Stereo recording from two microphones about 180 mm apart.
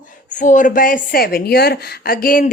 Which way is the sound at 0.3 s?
45° left (ahead or behind).